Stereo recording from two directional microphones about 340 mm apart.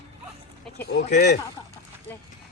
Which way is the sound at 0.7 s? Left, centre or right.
Left.